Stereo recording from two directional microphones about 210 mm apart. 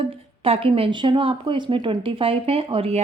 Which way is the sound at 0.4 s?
30° right (ahead or behind).